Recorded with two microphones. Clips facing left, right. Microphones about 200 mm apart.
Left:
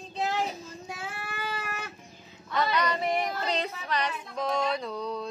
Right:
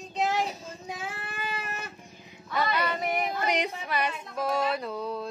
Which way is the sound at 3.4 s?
15° right (ahead or behind).